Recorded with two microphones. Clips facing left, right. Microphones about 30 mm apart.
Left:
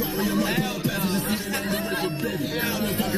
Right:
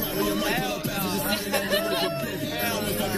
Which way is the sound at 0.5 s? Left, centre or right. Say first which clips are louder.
Even; centre.